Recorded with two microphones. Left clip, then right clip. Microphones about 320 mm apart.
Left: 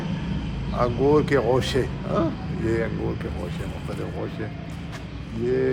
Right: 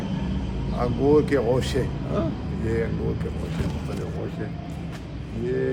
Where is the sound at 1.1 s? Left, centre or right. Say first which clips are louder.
Right 2 dB; centre.